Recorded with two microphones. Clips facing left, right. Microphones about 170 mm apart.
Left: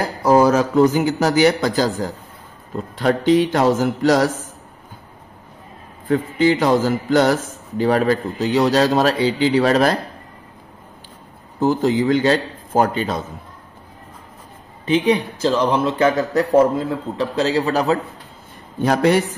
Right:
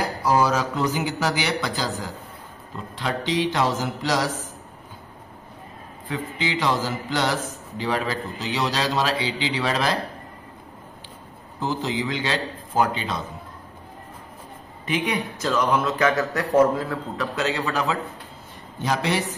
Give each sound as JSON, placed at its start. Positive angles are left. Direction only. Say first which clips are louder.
{"t": 0.2, "sound": "a man's voice", "louder": "left 8 dB", "side_deg": 50}
{"t": 6.0, "sound": "a man's voice", "louder": "left 12 dB", "side_deg": 50}
{"t": 11.6, "sound": "a man's voice", "louder": "left 9 dB", "side_deg": 50}
{"t": 14.9, "sound": "a man's voice", "louder": "left 8 dB", "side_deg": 30}
{"t": 18.8, "sound": "a man's voice", "louder": "left 8 dB", "side_deg": 50}